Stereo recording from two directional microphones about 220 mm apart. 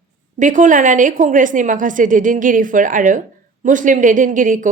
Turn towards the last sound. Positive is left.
turn(degrees=-35)  # may be behind; listen again after turning